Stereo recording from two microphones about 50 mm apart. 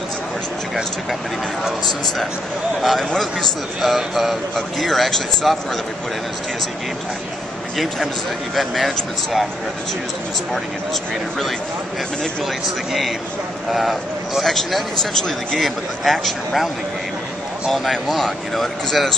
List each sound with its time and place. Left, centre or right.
2.8 s a man's voice: centre
7.7 s a man's voice: centre
13.7 s a man's voice: centre